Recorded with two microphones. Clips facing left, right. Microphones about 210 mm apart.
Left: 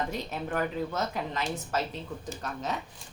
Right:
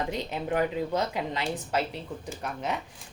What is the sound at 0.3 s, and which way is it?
Speech, 15° right (ahead or behind).